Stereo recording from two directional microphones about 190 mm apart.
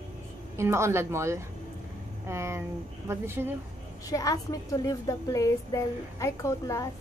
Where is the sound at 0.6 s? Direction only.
15° right (ahead or behind).